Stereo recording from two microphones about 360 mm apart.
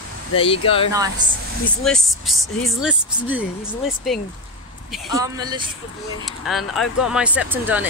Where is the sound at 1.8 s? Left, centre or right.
Centre.